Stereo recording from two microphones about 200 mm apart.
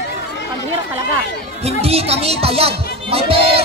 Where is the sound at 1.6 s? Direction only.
30° right (ahead or behind).